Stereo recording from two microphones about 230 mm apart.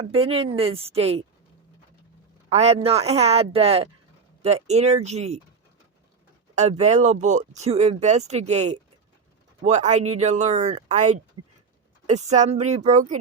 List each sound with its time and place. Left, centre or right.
0.0 s speech: right
2.5 s speech: right
6.6 s speech: right